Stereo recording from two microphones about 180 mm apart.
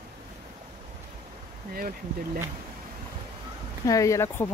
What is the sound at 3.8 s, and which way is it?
Speech, 20° left (ahead or behind).